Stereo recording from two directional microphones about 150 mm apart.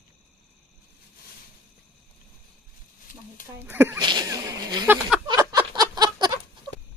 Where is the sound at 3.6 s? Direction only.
15° right (ahead or behind).